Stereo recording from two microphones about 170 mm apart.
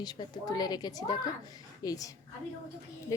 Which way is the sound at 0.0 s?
25° left (ahead or behind).